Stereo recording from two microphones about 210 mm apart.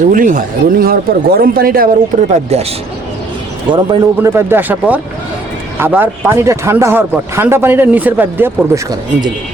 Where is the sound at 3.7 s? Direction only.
25° right (ahead or behind).